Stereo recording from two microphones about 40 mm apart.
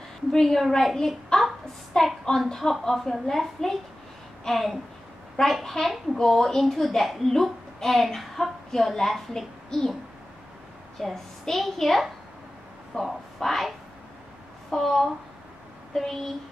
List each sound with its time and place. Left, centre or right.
0.3 s a woman's voice: centre
11.0 s a woman's voice: centre
13.0 s a sound: centre
14.7 s a woman's voice: centre